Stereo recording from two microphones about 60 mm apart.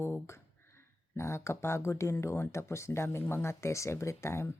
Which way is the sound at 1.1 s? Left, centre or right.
Left.